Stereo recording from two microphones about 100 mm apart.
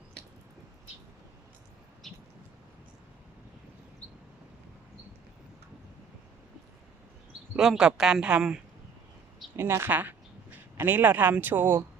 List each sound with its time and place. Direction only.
2.0 s a sound: centre (ahead or behind)
7.5 s speech: 5° right (ahead or behind)
9.6 s a man's voice: 25° right (ahead or behind)